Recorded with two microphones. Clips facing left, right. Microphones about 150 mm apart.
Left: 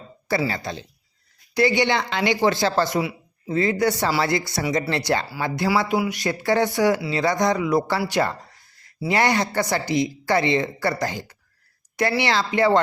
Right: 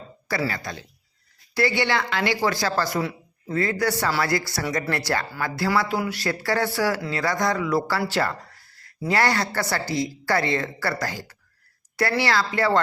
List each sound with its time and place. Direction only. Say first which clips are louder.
0.3 s speech: left 3 dB; 25° left (ahead or behind)
3.0 s speech: left 1 dB; 10° left (ahead or behind)